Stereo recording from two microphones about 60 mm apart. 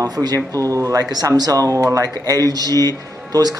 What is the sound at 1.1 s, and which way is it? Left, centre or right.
Speech, right.